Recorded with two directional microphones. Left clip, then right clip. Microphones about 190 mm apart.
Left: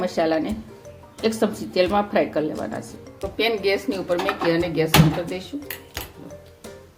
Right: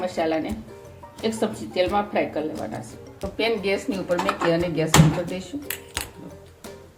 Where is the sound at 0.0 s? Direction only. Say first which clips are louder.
Left 3 dB; 40° left (ahead or behind).